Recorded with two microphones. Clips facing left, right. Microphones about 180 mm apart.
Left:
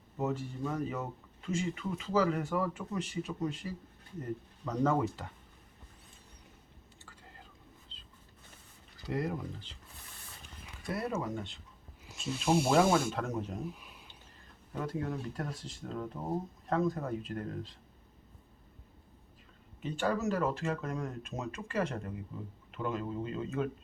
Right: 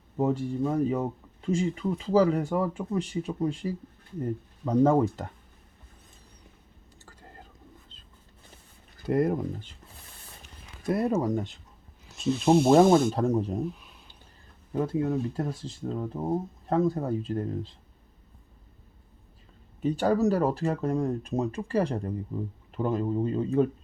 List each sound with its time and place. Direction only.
0.2 s speech: 35° right (ahead or behind)
7.0 s whispering: 45° right (ahead or behind)
9.0 s speech: 55° right (ahead or behind)
10.8 s speech: 45° right (ahead or behind)
12.0 s speech: 10° left (ahead or behind)
13.1 s speech: 35° right (ahead or behind)
13.7 s a sound: 10° left (ahead or behind)
14.8 s speech: 25° right (ahead or behind)
19.8 s speech: 40° right (ahead or behind)